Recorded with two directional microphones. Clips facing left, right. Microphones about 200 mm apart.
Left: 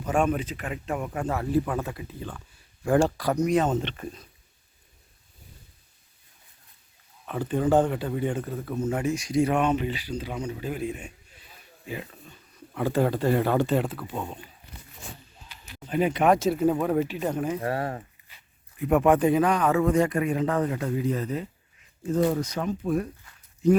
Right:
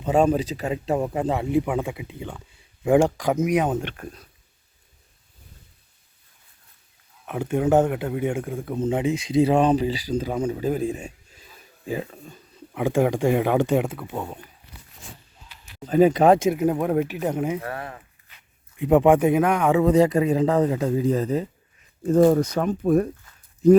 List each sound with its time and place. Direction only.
0.0 s speech: 25° right (ahead or behind)
3.3 s speech: 5° right (ahead or behind)
7.3 s speech: 10° right (ahead or behind)
9.4 s speech: 30° right (ahead or behind)
11.3 s a sound: 40° right (ahead or behind)
12.7 s speech: 15° right (ahead or behind)
16.0 s speech: 40° right (ahead or behind)
16.4 s speech: 15° right (ahead or behind)
17.6 s speech: 30° left (ahead or behind)
18.8 s speech: 20° right (ahead or behind)
20.1 s speech: 25° right (ahead or behind)
22.0 s speech: 50° right (ahead or behind)